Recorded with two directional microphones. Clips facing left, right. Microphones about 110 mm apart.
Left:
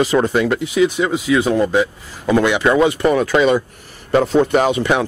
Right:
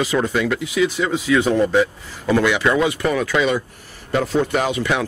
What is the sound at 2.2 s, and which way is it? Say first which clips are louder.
A man's voice: left 2 dB; 20° left (ahead or behind).